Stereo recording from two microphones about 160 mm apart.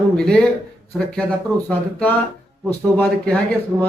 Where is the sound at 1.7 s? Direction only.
10° left (ahead or behind).